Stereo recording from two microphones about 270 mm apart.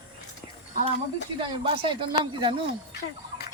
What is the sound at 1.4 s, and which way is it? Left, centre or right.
Speech, centre.